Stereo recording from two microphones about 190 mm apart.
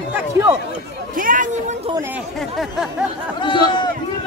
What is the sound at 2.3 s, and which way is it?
Speech, centre (ahead or behind).